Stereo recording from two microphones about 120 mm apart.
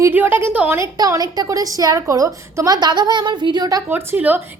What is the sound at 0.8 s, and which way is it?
A woman's voice, 30° right (ahead or behind).